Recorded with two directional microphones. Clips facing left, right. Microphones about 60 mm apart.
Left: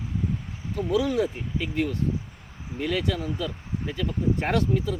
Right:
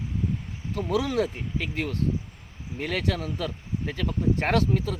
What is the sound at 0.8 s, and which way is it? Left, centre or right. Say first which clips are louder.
Speech: left 1 dB; right.